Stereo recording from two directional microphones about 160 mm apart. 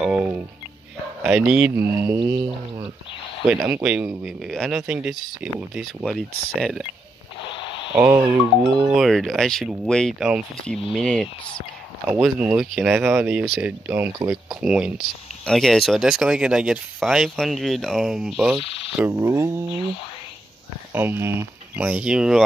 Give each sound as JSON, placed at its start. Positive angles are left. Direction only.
{"t": 0.0, "sound": "a sound", "side_deg": -5}
{"t": 1.2, "sound": "speech", "side_deg": -5}
{"t": 3.4, "sound": "speech", "side_deg": -10}
{"t": 7.5, "sound": "a sound", "side_deg": 30}
{"t": 7.9, "sound": "speech", "side_deg": -10}
{"t": 8.9, "sound": "speech", "side_deg": 0}
{"t": 12.1, "sound": "speech", "side_deg": -5}
{"t": 18.6, "sound": "speech", "side_deg": 35}
{"t": 19.0, "sound": "speech", "side_deg": -15}
{"t": 20.9, "sound": "speech", "side_deg": -15}